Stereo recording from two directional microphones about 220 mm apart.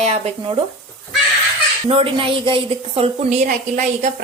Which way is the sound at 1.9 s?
25° right (ahead or behind).